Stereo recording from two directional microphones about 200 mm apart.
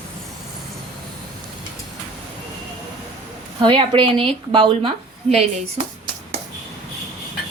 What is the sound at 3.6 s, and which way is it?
A woman's voice, 25° right (ahead or behind).